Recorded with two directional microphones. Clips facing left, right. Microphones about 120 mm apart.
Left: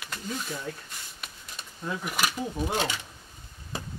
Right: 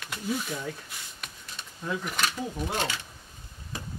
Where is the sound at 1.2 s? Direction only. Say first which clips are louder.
Right 1 dB; 5° left (ahead or behind).